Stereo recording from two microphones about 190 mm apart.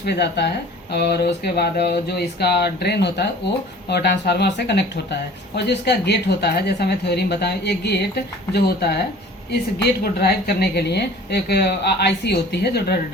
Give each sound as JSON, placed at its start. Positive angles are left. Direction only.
{"t": 0.0, "sound": "a woman's voice", "side_deg": 60}